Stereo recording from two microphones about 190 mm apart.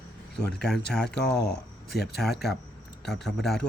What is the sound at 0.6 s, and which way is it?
Speech, 5° left (ahead or behind).